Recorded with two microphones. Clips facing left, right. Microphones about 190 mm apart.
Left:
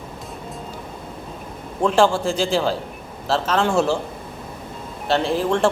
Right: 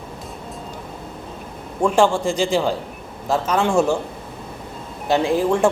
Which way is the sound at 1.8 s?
10° right (ahead or behind).